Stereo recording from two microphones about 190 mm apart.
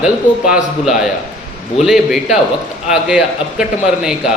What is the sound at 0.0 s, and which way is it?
A man's voice, 5° right (ahead or behind).